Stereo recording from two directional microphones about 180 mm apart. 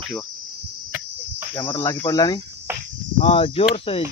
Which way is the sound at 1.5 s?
25° left (ahead or behind).